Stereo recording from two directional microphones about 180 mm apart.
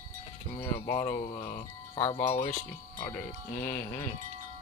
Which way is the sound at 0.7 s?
35° left (ahead or behind).